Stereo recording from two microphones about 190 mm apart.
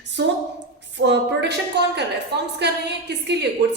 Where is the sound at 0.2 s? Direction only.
65° right (ahead or behind).